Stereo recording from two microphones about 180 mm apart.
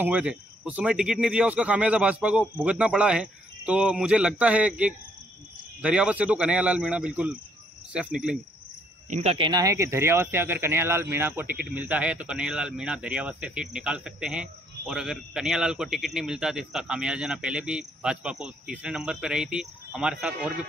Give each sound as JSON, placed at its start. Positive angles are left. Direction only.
{"t": 0.0, "sound": "speech", "side_deg": -5}
{"t": 9.1, "sound": "speech", "side_deg": -35}